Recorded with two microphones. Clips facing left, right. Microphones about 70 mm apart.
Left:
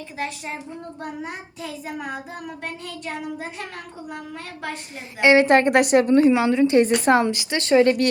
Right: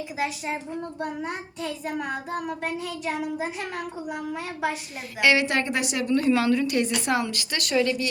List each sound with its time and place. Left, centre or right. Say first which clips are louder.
0.9 s child singing: even; centre
5.2 s a woman's voice: left 7 dB; left
6.1 s a woman's voice: left 5 dB; left
6.8 s a woman's voice: left 7 dB; left
7.9 s speech: left 8 dB; left